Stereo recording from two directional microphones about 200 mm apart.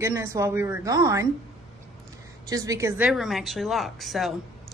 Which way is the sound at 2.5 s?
15° right (ahead or behind).